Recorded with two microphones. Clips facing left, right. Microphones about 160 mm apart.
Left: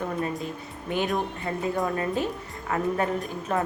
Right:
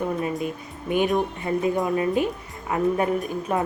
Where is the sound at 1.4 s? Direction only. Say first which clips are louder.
Right 4 dB; 15° right (ahead or behind).